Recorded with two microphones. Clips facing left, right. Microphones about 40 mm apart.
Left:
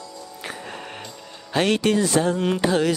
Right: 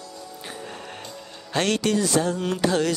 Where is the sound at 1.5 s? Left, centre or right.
Centre.